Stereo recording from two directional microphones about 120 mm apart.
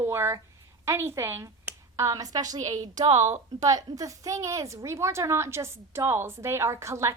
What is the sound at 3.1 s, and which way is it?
Speech, 70° right (ahead or behind).